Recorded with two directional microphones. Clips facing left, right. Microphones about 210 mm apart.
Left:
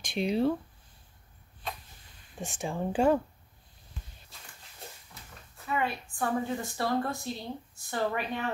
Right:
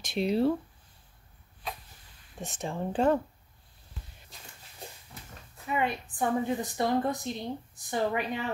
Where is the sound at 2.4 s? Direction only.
Centre (ahead or behind).